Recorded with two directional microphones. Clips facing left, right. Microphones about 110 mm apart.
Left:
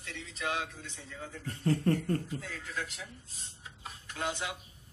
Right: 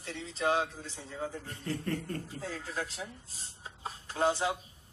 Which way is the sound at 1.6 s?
35° left (ahead or behind).